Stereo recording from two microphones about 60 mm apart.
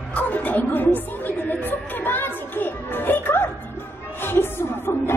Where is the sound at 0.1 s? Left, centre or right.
Left.